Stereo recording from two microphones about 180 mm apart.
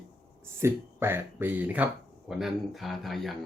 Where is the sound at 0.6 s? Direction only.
15° right (ahead or behind).